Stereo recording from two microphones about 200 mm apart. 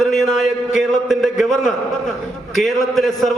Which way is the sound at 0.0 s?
Centre (ahead or behind).